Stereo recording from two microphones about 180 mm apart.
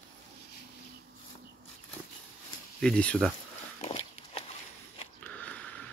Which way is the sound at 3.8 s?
35° left (ahead or behind).